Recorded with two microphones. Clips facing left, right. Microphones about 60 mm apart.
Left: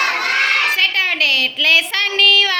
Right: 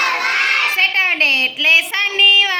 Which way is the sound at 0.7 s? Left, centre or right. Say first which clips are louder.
Right 1 dB; right.